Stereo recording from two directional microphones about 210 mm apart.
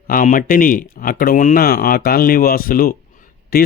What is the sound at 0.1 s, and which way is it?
Speech, 40° left (ahead or behind).